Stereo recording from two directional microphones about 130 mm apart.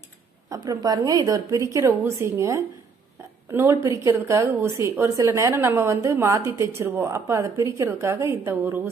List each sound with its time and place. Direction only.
0.5 s a woman's voice: 30° right (ahead or behind)